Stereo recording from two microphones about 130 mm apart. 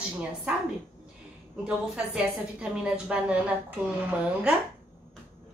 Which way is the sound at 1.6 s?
5° right (ahead or behind).